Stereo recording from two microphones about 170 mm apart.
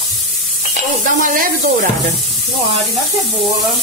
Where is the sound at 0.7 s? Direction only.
50° right (ahead or behind).